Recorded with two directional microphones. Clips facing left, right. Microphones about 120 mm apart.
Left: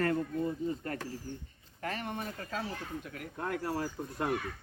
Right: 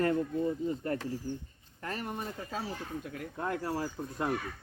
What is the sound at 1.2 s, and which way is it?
Speech, 20° right (ahead or behind).